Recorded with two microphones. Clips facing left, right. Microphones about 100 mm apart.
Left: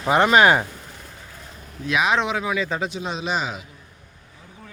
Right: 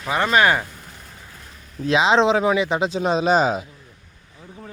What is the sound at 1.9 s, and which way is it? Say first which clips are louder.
Speech: right 5 dB; 25° right (ahead or behind).